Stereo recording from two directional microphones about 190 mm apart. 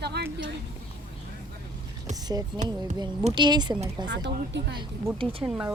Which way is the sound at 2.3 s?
20° right (ahead or behind).